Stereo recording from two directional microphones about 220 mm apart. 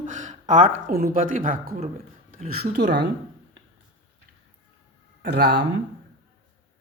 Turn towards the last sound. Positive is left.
turn(degrees=-50)  # may be behind; listen again after turning